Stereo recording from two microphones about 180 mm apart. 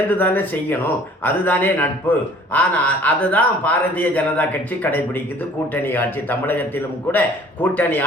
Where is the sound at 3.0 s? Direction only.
10° left (ahead or behind).